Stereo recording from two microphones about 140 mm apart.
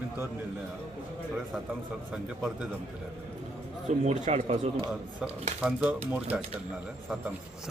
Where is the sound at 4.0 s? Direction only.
55° right (ahead or behind).